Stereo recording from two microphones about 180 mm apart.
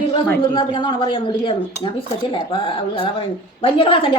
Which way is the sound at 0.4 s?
25° left (ahead or behind).